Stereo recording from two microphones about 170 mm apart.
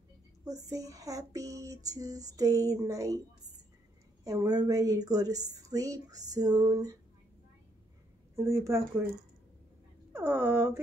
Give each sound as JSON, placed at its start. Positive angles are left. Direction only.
{"t": 0.5, "sound": "a woman's voice", "side_deg": -20}
{"t": 4.2, "sound": "a woman's voice", "side_deg": -20}
{"t": 8.4, "sound": "speech", "side_deg": -15}
{"t": 10.1, "sound": "speech", "side_deg": -15}